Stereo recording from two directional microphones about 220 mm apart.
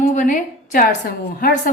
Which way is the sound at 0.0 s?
35° left (ahead or behind).